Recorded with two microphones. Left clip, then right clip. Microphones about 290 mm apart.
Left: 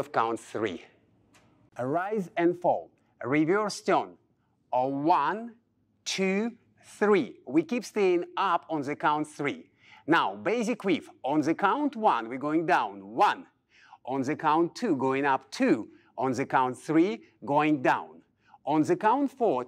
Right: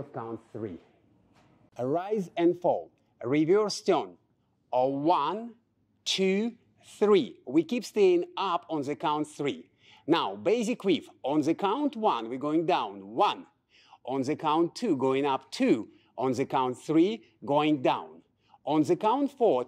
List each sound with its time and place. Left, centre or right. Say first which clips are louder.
0.1 s speech: left 11 dB; centre
1.7 s speech: even; left